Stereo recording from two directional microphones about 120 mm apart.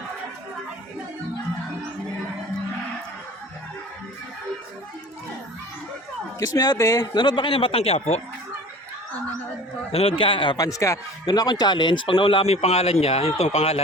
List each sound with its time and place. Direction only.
6.4 s a man's voice: 30° left (ahead or behind); by 8.2 s 60° left (ahead or behind)
9.9 s a man's voice: 50° left (ahead or behind)
10.6 s speech: 25° left (ahead or behind)
11.3 s a man's voice: 35° left (ahead or behind); by 13.8 s 65° left (ahead or behind)